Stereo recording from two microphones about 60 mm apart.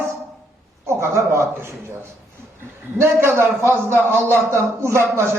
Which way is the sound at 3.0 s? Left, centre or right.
Right.